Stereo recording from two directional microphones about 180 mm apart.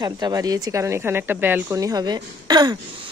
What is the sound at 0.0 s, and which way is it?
Speech, 20° right (ahead or behind).